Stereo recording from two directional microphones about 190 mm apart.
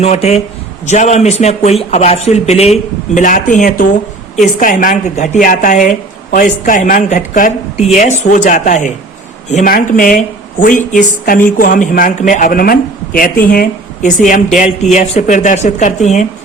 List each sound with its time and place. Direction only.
0.0 s a woman's voice: 35° left (ahead or behind)